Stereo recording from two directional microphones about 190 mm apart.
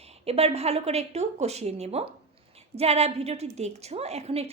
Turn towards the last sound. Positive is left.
turn(degrees=-30)  # may be behind; listen again after turning